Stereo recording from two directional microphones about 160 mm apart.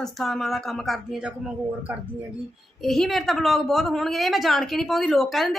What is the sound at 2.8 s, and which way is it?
Speech, centre (ahead or behind).